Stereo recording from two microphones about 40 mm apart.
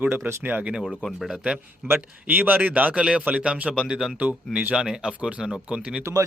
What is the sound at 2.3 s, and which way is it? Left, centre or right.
Speech, right.